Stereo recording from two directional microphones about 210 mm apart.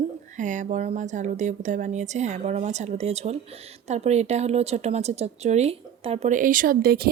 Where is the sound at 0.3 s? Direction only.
35° right (ahead or behind).